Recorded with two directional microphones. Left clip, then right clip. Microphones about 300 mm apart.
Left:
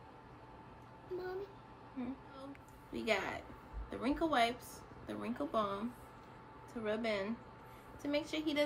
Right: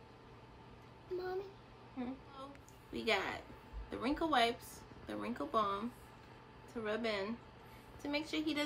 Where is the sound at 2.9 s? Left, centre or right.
Centre.